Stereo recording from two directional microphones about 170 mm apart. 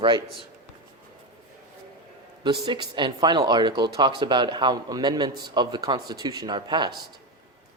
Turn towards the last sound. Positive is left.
turn(degrees=-25)  # may be behind; listen again after turning